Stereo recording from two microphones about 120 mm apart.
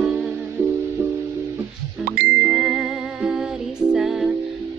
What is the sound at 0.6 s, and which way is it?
Music, 20° right (ahead or behind).